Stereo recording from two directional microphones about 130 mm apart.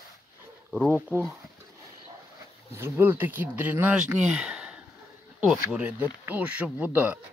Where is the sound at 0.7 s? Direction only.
15° right (ahead or behind).